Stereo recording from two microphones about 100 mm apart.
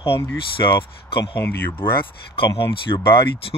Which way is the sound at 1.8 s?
55° left (ahead or behind).